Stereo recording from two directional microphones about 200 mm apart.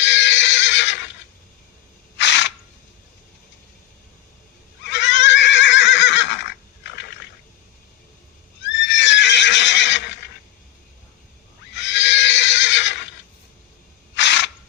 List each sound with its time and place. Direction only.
0.0 s neigh: 65° left (ahead or behind)
2.1 s a sound: 65° left (ahead or behind)
4.9 s neigh: 60° left (ahead or behind)
8.6 s horse: 65° left (ahead or behind)
11.7 s neigh: 60° left (ahead or behind)
14.2 s a sound: 60° left (ahead or behind)